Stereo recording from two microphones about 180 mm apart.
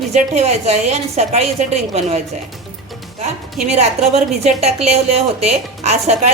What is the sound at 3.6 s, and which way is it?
A woman's voice, 35° right (ahead or behind).